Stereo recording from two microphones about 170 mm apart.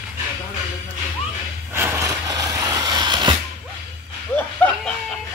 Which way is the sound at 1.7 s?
15° right (ahead or behind).